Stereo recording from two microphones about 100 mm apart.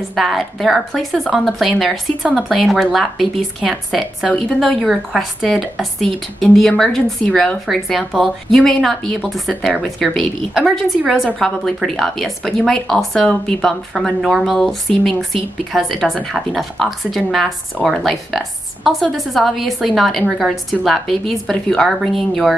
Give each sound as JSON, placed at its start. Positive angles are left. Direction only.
{"t": 0.1, "sound": "a woman's voice", "side_deg": 0}